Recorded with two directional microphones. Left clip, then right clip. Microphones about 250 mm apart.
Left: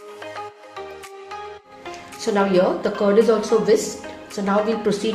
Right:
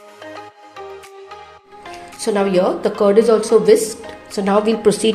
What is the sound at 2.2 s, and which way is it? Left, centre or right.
Speech, right.